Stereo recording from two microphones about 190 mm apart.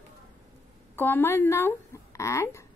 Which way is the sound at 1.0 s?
10° left (ahead or behind).